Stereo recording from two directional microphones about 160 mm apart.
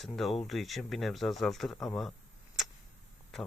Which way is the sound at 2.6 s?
Centre (ahead or behind).